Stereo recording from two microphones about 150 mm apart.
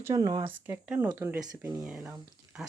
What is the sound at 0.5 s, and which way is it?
Speech, 15° right (ahead or behind).